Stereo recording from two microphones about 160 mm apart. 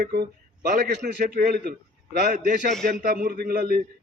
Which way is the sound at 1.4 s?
65° right (ahead or behind).